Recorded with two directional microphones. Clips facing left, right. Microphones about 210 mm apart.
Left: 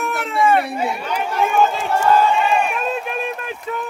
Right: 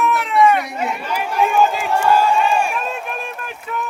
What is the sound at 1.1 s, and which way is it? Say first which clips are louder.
Run: right 2 dB; 10° right (ahead or behind).